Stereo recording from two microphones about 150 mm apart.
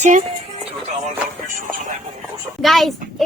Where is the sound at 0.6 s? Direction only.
50° right (ahead or behind).